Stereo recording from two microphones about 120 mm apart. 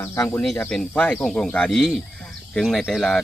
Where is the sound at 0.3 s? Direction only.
10° left (ahead or behind).